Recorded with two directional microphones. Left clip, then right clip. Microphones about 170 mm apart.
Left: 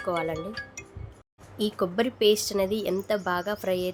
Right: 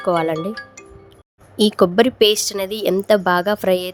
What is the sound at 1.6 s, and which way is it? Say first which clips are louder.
A woman's voice: right 12 dB; 50° right (ahead or behind).